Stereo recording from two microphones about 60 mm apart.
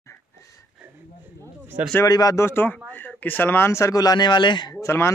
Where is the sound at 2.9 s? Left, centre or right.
Left.